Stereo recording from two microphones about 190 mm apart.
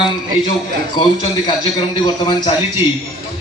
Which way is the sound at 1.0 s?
30° left (ahead or behind).